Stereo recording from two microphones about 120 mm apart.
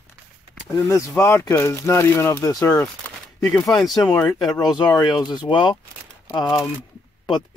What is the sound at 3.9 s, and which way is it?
Speech, 30° left (ahead or behind).